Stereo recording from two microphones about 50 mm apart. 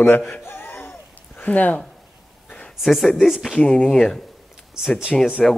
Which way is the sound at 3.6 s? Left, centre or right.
Centre.